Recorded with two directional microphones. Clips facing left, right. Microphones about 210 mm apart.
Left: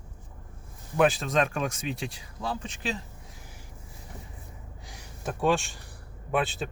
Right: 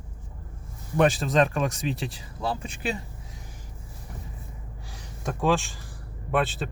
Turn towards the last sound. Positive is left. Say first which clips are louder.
# right 2 dB
turn(degrees=0)  # may be behind; listen again after turning